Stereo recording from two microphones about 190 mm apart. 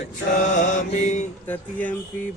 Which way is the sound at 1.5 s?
10° left (ahead or behind).